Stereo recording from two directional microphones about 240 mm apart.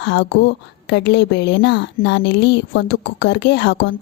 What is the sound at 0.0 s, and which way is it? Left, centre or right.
Speech, left.